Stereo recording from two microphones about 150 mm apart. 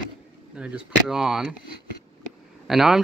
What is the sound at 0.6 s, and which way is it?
Speech, 5° right (ahead or behind).